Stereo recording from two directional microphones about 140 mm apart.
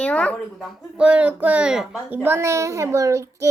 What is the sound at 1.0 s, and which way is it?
A child's voice, 10° right (ahead or behind).